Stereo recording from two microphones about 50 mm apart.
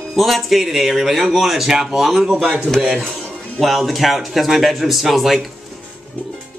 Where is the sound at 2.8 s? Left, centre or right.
Right.